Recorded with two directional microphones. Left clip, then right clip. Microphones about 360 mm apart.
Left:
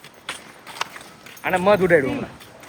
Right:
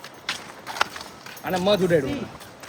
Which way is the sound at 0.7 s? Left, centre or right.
Centre.